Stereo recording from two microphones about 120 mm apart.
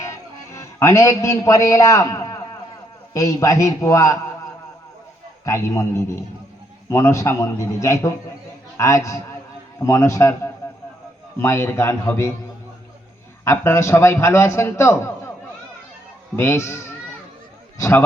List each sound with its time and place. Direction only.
0.0 s a man's voice: 25° left (ahead or behind)
5.5 s a man's voice: 25° left (ahead or behind)
13.4 s a man's voice: 20° left (ahead or behind)
16.3 s a man's voice: 20° left (ahead or behind)